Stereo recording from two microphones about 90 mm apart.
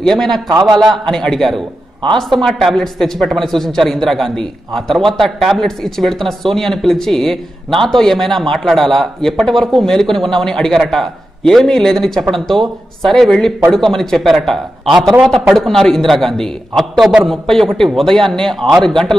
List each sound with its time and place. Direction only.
0.0 s speech: 5° left (ahead or behind)